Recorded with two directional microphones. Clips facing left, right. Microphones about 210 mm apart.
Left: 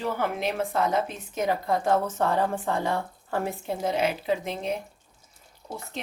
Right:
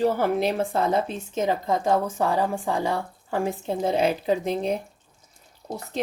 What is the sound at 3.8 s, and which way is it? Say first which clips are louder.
Speech: right 3 dB; 35° right (ahead or behind).